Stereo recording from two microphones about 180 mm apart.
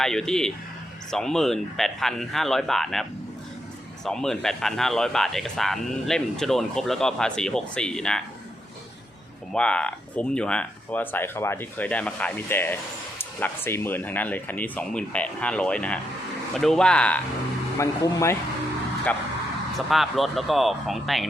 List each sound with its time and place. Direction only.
0.0 s a man's voice: 5° left (ahead or behind)
9.5 s a man's voice: 5° left (ahead or behind)
17.7 s speech: 15° left (ahead or behind)
19.7 s a man's voice: centre (ahead or behind)